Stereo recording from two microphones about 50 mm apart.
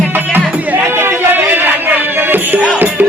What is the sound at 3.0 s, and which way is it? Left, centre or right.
Speech, right.